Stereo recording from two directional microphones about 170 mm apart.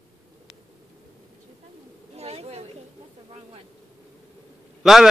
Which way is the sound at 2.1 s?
40° right (ahead or behind).